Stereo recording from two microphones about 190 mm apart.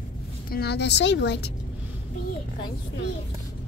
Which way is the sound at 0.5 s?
55° left (ahead or behind).